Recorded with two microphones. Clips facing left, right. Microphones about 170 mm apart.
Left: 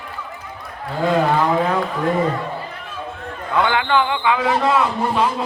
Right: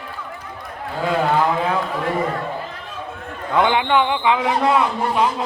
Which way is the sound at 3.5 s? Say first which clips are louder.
Right 1 dB; 20° right (ahead or behind).